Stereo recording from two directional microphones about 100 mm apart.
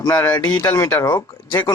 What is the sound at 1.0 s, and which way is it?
Speech, 45° left (ahead or behind).